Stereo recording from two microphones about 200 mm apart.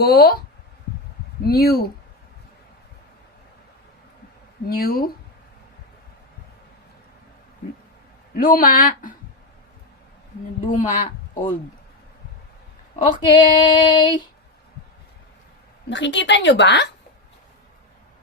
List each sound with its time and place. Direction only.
0.0 s speech: 50° left (ahead or behind)
1.5 s speech: 50° left (ahead or behind)
4.6 s speech: 50° left (ahead or behind)
8.4 s speech: 45° left (ahead or behind)
10.7 s speech: 40° left (ahead or behind)
13.1 s female singing: 25° left (ahead or behind)
15.9 s a woman's voice: 65° left (ahead or behind)